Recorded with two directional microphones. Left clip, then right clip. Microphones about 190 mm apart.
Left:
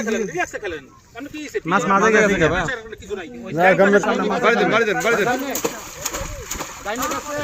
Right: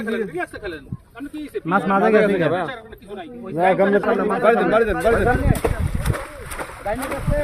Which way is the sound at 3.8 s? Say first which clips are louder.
Left 2 dB; 40° left (ahead or behind).